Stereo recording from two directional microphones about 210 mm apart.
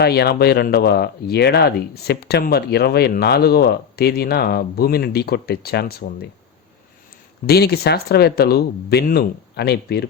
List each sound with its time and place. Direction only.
0.0 s speech: 50° left (ahead or behind)
7.4 s speech: 50° left (ahead or behind)